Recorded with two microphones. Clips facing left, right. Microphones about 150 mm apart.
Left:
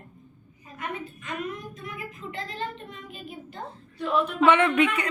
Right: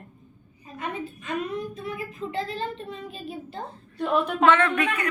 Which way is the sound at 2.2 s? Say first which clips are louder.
Right 8 dB; 65° right (ahead or behind).